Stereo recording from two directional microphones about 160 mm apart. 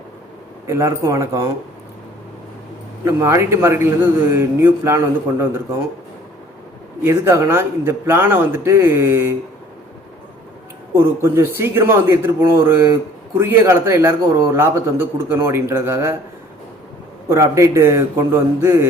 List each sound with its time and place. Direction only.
0.7 s speech: 20° right (ahead or behind)
3.0 s speech: 15° right (ahead or behind)
7.0 s speech: 15° right (ahead or behind)
10.9 s speech: 15° right (ahead or behind)
17.2 s speech: 20° right (ahead or behind)